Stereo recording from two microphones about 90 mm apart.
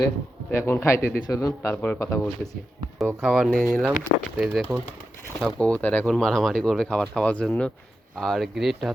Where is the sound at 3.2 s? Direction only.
5° right (ahead or behind).